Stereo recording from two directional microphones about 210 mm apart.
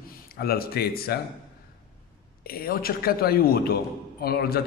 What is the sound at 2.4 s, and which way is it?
Speech, 45° left (ahead or behind).